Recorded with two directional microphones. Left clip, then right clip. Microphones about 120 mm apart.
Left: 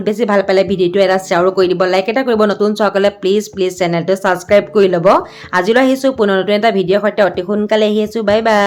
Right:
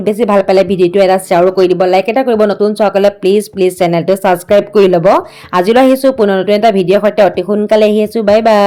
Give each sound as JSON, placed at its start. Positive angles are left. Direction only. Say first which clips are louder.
{"t": 0.0, "sound": "a woman's voice", "louder": "right 3 dB", "side_deg": -30}